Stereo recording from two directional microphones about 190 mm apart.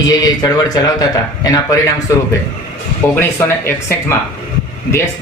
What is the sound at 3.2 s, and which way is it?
Speech, 15° left (ahead or behind).